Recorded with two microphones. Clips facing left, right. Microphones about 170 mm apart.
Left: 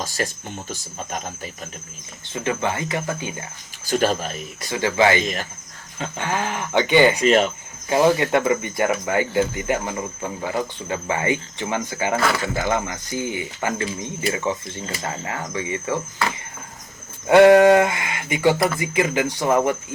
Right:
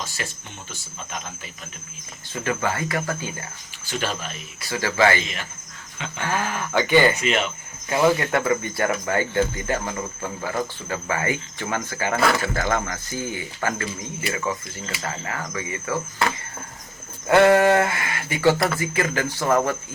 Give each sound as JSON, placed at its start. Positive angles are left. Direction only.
{"t": 0.0, "sound": "speech", "side_deg": 40}
{"t": 2.3, "sound": "speech", "side_deg": 20}
{"t": 3.8, "sound": "speech", "side_deg": 40}
{"t": 4.7, "sound": "speech", "side_deg": 20}
{"t": 5.2, "sound": "speech", "side_deg": 40}
{"t": 6.1, "sound": "speech", "side_deg": 20}
{"t": 7.2, "sound": "speech", "side_deg": 40}
{"t": 8.0, "sound": "speech", "side_deg": 20}
{"t": 17.2, "sound": "speech", "side_deg": 20}